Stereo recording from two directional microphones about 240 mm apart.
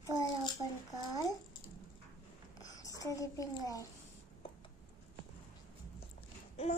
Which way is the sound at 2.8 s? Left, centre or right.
Centre.